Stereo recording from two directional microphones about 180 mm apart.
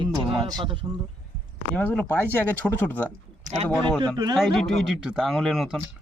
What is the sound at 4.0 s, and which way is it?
Speech, 25° right (ahead or behind).